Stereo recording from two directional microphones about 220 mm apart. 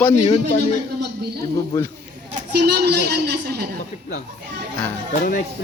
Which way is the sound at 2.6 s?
45° right (ahead or behind).